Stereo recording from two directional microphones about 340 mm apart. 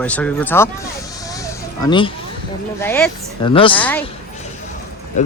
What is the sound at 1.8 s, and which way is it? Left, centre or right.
Speech, centre.